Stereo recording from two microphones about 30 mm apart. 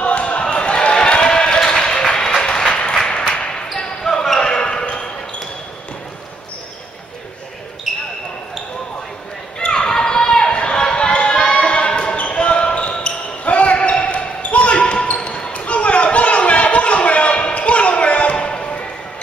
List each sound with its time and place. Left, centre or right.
0.0 s a sound: left
3.3 s basketball bounce: left
3.8 s basketball bounce: centre
4.4 s basketball bounce: left
9.7 s a sound: left
10.5 s a sound: left
10.8 s music: left
11.7 s basketball bounce: left
13.7 s basketball bounce: left
15.6 s chatter: left
18.3 s music: left